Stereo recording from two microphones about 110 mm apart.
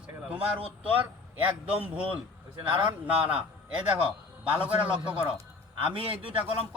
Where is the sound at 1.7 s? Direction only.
15° right (ahead or behind).